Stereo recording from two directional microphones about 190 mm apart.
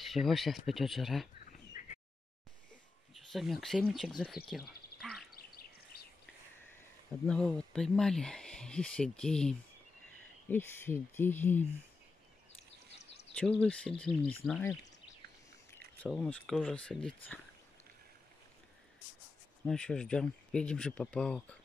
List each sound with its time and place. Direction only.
0.0 s speech: centre (ahead or behind)
1.8 s a sound: 40° left (ahead or behind)
3.2 s speech: centre (ahead or behind)
4.5 s a sound: centre (ahead or behind)
5.9 s a sound: 55° left (ahead or behind)
7.2 s speech: 5° left (ahead or behind)
13.4 s speech: 5° left (ahead or behind)
16.1 s speech: centre (ahead or behind)
19.6 s speech: 5° left (ahead or behind)